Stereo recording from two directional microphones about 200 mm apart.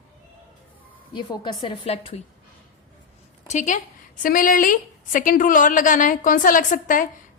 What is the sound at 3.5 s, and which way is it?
A woman's voice, 40° left (ahead or behind).